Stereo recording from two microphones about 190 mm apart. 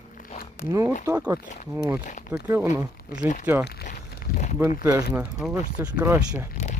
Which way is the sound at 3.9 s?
40° left (ahead or behind).